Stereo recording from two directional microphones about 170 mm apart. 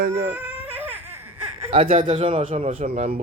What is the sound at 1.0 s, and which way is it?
Laughter, 15° right (ahead or behind).